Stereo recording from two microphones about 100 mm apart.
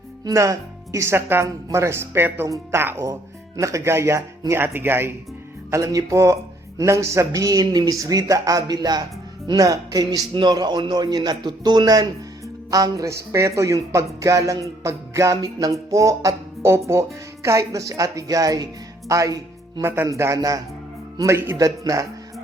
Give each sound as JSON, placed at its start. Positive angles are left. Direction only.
{"t": 0.3, "sound": "a woman's voice", "side_deg": -35}